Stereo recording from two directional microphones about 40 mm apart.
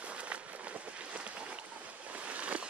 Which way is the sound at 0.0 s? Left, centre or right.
Right.